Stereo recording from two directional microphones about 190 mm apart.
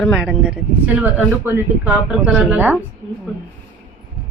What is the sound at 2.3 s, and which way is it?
Speech, centre (ahead or behind).